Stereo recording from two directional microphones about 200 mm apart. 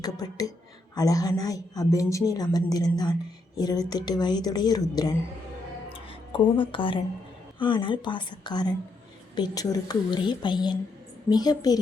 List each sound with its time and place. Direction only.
0.0 s a woman's voice: 20° left (ahead or behind)